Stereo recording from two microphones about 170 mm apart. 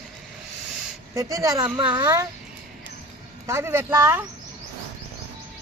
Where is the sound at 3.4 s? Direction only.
15° right (ahead or behind).